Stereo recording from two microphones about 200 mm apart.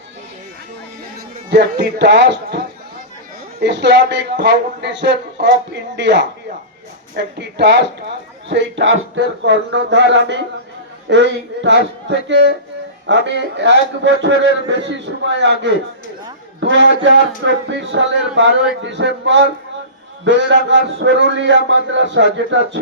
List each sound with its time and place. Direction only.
1.5 s a man's voice: 55° right (ahead or behind)
3.6 s a man's voice: 60° right (ahead or behind)
16.6 s a sound: 65° right (ahead or behind)
17.0 s a man's voice: 65° right (ahead or behind)